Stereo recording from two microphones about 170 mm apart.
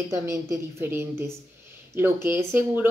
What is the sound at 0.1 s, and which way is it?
A woman's voice, 20° right (ahead or behind).